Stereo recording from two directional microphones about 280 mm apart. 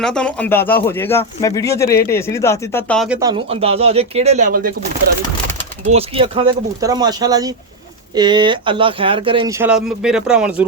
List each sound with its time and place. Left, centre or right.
0.0 s speech: centre
3.2 s speech: centre
5.9 s speech: right; by 10.7 s centre